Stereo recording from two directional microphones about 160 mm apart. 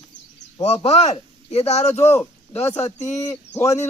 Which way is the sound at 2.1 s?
15° left (ahead or behind).